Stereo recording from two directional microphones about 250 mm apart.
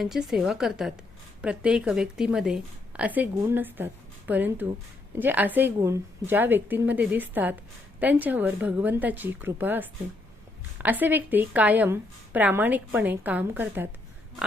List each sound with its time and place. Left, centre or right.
0.0 s a woman's voice: centre